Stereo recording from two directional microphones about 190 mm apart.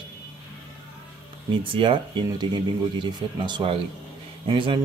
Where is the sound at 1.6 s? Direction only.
25° right (ahead or behind).